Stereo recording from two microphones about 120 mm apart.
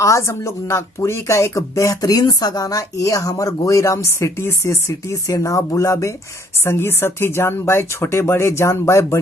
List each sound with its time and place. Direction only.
0.0 s speech: 25° left (ahead or behind)